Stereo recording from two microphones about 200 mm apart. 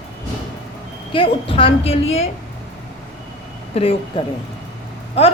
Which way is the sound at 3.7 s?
30° left (ahead or behind).